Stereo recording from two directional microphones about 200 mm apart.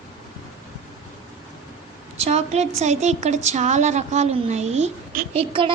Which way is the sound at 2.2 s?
35° right (ahead or behind).